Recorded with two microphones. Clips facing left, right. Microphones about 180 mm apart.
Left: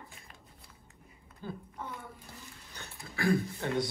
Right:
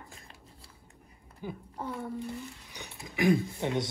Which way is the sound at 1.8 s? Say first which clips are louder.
Right 7 dB; 35° right (ahead or behind).